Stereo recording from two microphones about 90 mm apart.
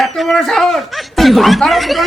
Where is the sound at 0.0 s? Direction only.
Centre (ahead or behind).